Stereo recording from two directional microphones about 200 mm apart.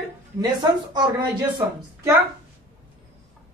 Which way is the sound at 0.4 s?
20° right (ahead or behind).